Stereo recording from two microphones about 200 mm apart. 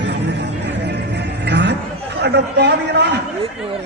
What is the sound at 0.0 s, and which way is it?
Music, 60° right (ahead or behind).